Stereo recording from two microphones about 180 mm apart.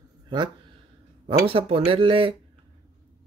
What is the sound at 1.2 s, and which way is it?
Speech, 30° right (ahead or behind).